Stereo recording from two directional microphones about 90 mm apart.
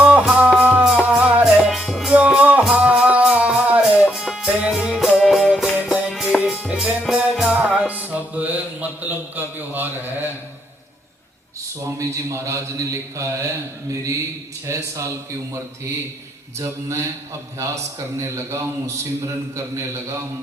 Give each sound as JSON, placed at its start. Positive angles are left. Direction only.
{"t": 0.0, "sound": "music", "side_deg": -10}
{"t": 2.1, "sound": "music", "side_deg": -15}
{"t": 11.8, "sound": "speech", "side_deg": -35}
{"t": 14.7, "sound": "speech", "side_deg": -35}
{"t": 18.2, "sound": "speech", "side_deg": -30}